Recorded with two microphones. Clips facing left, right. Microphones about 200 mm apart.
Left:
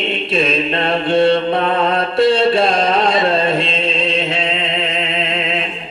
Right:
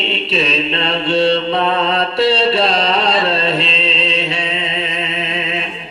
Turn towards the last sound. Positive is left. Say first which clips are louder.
# left 2 dB
turn(degrees=55)  # may be behind; listen again after turning